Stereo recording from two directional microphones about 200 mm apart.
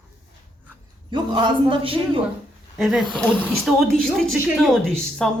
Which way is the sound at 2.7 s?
Centre (ahead or behind).